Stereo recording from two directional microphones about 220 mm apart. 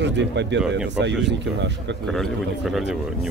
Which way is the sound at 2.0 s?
Centre (ahead or behind).